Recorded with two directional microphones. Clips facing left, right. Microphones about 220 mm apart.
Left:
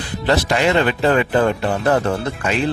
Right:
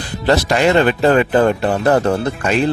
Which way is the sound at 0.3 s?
40° right (ahead or behind).